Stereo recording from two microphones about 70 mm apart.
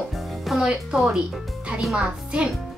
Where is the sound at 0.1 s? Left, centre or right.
Centre.